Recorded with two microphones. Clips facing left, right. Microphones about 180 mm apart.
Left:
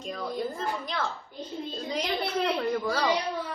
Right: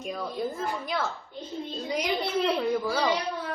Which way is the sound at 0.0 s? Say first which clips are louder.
Right 1 dB; 5° right (ahead or behind).